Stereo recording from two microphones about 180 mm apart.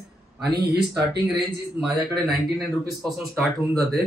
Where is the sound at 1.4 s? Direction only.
5° right (ahead or behind).